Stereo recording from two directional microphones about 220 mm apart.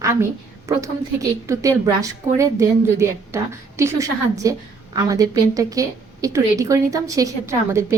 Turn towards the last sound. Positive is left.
turn(degrees=-15)  # may be behind; listen again after turning